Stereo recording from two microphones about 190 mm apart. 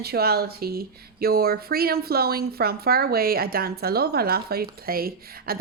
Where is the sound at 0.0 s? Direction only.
55° right (ahead or behind).